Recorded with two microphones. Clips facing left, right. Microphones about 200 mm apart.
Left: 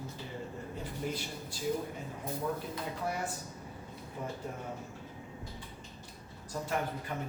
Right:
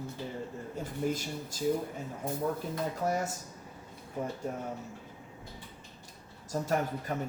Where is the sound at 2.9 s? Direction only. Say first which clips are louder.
Right 4 dB; 45° right (ahead or behind).